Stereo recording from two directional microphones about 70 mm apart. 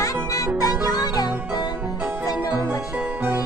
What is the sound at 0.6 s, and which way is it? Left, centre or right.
Music, left.